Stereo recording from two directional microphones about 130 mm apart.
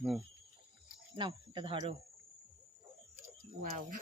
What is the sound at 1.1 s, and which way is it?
Speech, 40° right (ahead or behind).